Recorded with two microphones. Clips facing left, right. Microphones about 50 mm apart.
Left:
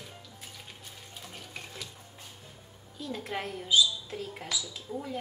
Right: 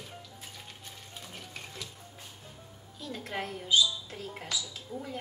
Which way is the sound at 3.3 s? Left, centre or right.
Centre.